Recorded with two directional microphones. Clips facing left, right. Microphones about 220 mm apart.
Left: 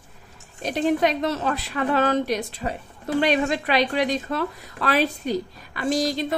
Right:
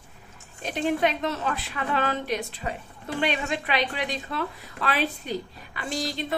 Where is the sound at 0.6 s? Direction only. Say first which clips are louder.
Left 4 dB; 40° left (ahead or behind).